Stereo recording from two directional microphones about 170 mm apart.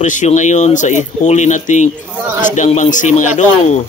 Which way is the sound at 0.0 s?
45° left (ahead or behind).